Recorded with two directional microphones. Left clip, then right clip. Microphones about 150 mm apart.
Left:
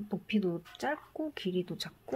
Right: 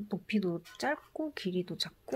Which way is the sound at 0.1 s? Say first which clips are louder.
Left 1 dB; 15° right (ahead or behind).